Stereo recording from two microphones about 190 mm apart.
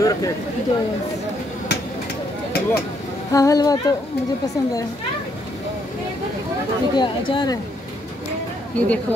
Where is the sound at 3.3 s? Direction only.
20° left (ahead or behind).